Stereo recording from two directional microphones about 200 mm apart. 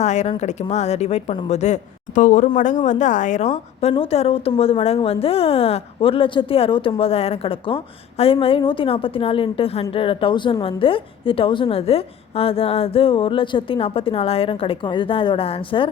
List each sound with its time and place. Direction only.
0.0 s a woman's voice: 35° left (ahead or behind)